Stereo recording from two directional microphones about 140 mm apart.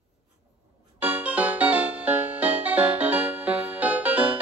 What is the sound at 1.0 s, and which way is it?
Music, 10° right (ahead or behind).